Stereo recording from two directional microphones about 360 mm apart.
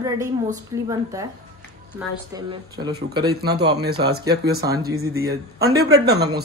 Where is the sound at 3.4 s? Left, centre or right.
Right.